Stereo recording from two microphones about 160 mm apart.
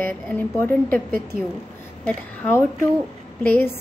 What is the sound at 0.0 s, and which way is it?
Speech, 10° left (ahead or behind).